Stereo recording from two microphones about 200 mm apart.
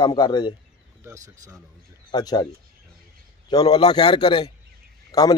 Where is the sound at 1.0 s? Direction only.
15° right (ahead or behind).